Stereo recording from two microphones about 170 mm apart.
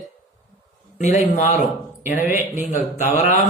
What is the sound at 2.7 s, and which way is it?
Speech, 45° left (ahead or behind).